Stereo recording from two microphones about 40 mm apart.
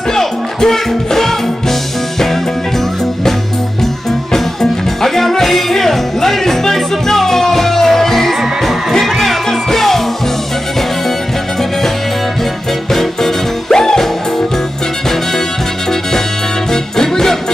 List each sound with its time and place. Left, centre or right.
0.1 s music: centre
4.3 s music: centre
12.9 s music: centre
16.7 s music: centre